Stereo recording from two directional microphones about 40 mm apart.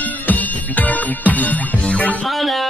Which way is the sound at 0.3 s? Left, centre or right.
Left.